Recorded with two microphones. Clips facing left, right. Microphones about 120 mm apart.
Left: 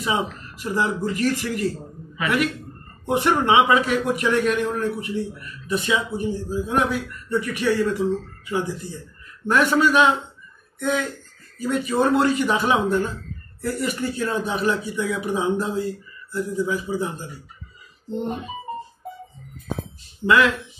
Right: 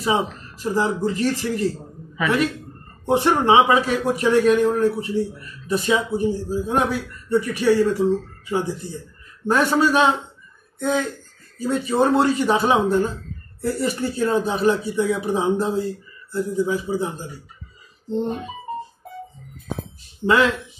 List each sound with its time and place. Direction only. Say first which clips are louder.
0.0 s a man's voice: right 3 dB; 30° right (ahead or behind)
20.2 s a man's voice: even; 30° right (ahead or behind)